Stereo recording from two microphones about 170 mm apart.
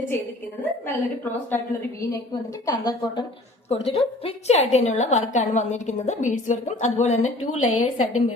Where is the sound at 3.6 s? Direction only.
40° left (ahead or behind).